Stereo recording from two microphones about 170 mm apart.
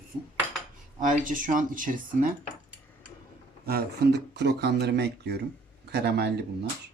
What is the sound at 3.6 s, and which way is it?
Speech, 65° right (ahead or behind).